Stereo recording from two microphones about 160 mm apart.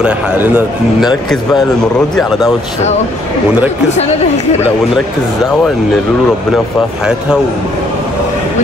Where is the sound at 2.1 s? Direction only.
Centre (ahead or behind).